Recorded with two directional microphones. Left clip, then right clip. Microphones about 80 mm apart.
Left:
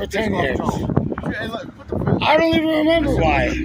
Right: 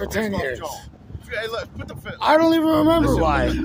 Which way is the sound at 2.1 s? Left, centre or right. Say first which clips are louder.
Even; right.